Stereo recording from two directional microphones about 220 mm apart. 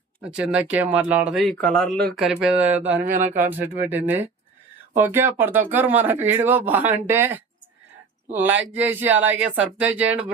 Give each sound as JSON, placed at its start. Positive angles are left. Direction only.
{"t": 0.3, "sound": "speech", "side_deg": -5}
{"t": 3.0, "sound": "speech", "side_deg": -35}
{"t": 3.3, "sound": "speech", "side_deg": -10}